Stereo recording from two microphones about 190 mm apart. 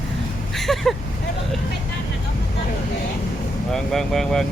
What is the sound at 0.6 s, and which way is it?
Speech, centre (ahead or behind).